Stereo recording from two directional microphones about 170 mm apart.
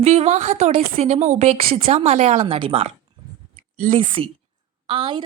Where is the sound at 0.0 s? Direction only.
35° right (ahead or behind).